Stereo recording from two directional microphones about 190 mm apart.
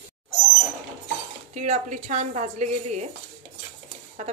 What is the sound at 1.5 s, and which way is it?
A woman's voice, 40° right (ahead or behind).